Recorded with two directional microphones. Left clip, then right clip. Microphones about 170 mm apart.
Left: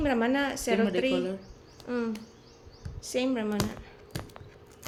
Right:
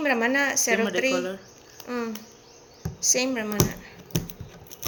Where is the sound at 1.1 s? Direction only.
35° left (ahead or behind).